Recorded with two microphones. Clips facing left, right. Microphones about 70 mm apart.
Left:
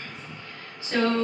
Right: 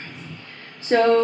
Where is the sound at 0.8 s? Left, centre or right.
Right.